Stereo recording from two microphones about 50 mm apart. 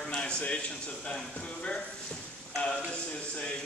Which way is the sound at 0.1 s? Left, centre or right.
Left.